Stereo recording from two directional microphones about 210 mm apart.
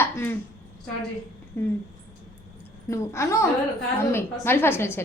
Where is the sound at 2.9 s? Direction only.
15° left (ahead or behind).